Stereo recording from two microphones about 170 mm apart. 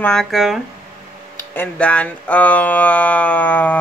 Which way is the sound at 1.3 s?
10° left (ahead or behind).